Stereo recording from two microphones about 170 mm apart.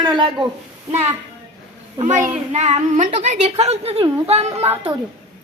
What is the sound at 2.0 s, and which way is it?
A woman's voice, 45° right (ahead or behind).